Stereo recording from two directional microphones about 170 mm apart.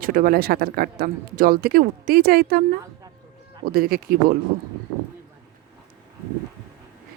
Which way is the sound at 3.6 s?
60° right (ahead or behind).